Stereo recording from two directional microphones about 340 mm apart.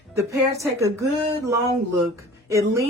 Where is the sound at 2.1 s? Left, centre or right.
Centre.